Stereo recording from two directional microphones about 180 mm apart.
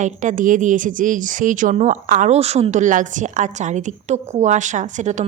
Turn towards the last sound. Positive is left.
turn(degrees=-40)  # may be behind; listen again after turning